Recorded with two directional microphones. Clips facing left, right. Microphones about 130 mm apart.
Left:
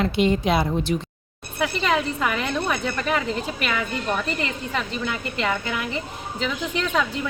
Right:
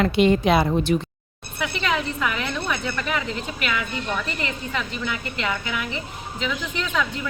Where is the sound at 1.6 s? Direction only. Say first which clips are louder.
Left 3 dB; 40° left (ahead or behind).